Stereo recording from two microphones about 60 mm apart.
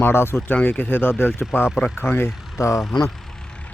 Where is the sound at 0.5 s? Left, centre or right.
Left.